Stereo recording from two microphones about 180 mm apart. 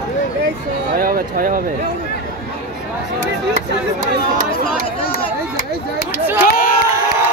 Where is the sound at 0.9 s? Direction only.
55° right (ahead or behind).